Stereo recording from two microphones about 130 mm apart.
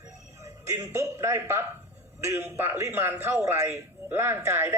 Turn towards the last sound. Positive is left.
turn(degrees=-20)  # may be behind; listen again after turning